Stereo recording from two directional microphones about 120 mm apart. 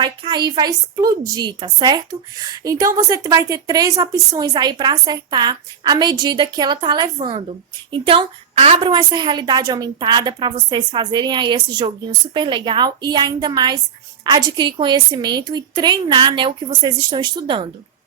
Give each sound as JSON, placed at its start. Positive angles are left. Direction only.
{"t": 0.0, "sound": "a woman's voice", "side_deg": -35}
{"t": 8.9, "sound": "a woman's voice", "side_deg": -40}